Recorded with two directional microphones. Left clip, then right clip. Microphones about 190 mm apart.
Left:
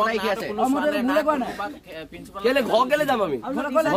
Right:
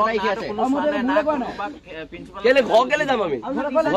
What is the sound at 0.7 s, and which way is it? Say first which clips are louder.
Speech: right 1 dB; 35° left (ahead or behind).